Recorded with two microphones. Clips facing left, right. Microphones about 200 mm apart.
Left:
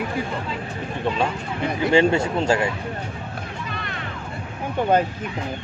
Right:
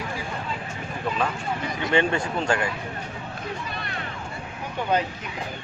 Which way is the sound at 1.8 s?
30° left (ahead or behind).